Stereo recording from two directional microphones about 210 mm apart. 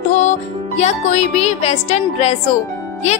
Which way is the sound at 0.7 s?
30° left (ahead or behind).